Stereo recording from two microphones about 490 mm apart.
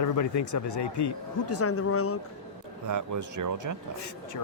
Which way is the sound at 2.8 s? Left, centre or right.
Right.